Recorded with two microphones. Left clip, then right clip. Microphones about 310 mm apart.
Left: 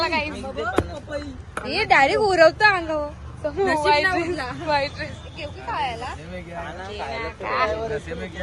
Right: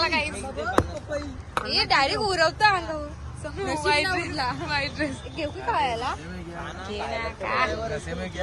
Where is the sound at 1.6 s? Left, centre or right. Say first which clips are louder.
Left 5 dB; left.